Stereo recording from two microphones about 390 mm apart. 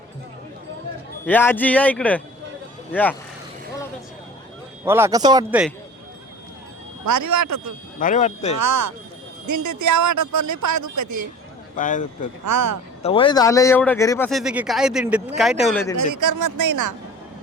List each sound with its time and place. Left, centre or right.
1.3 s speech: centre
4.9 s a man's voice: centre
7.0 s speech: right
7.9 s speech: centre
8.5 s speech: right
11.8 s speech: centre
12.5 s speech: right
13.0 s speech: centre
16.0 s speech: right